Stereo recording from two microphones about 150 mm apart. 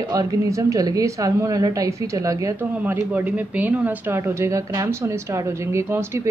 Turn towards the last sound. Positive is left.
turn(degrees=-15)  # may be behind; listen again after turning